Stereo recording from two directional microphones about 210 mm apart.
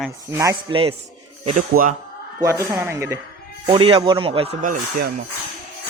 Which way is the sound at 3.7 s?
25° right (ahead or behind).